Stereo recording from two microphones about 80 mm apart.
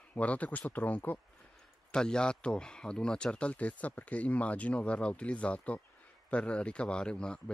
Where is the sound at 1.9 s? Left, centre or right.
Centre.